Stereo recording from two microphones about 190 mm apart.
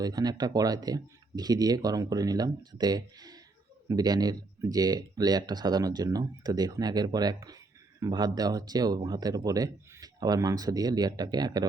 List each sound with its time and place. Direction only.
0.0 s speech: 20° right (ahead or behind)